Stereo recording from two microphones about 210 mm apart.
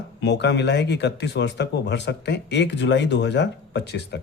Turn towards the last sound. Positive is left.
turn(degrees=55)  # may be behind; listen again after turning